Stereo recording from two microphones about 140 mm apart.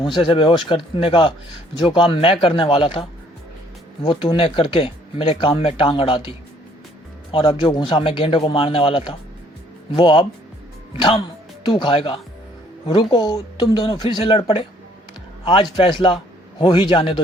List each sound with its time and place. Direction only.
0.0 s speech: 35° left (ahead or behind)
7.3 s speech: 40° left (ahead or behind)
11.6 s speech: 35° left (ahead or behind)
15.7 s speech: 35° left (ahead or behind)